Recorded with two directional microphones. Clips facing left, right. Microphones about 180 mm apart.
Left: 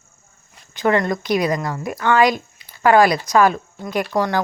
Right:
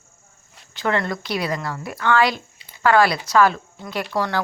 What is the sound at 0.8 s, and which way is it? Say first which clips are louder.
A woman's voice: left 5 dB; 15° left (ahead or behind).